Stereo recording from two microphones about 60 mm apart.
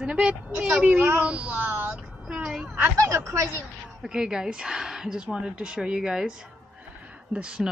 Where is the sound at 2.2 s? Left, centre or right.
Centre.